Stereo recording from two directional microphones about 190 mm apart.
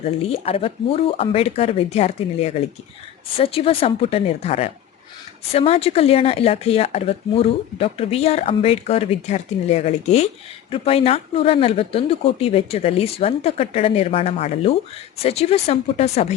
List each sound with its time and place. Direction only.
0.0 s speech: 30° left (ahead or behind)